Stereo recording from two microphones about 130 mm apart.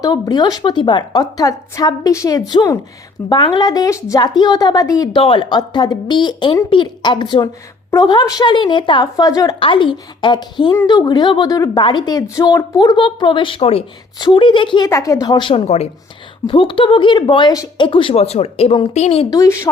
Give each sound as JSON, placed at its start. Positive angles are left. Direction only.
{"t": 0.0, "sound": "speech", "side_deg": 30}
{"t": 3.2, "sound": "speech", "side_deg": 35}
{"t": 9.6, "sound": "speech", "side_deg": 40}
{"t": 14.2, "sound": "speech", "side_deg": 35}
{"t": 14.8, "sound": "speech", "side_deg": 25}
{"t": 16.5, "sound": "speech", "side_deg": 40}
{"t": 19.3, "sound": "speech", "side_deg": 25}